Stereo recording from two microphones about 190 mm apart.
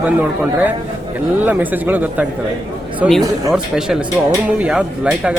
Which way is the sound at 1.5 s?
10° right (ahead or behind).